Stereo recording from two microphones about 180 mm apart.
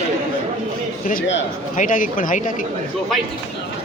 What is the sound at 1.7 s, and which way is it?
Speech, 45° left (ahead or behind).